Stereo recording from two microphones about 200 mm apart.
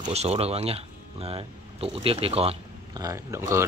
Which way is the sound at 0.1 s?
30° right (ahead or behind).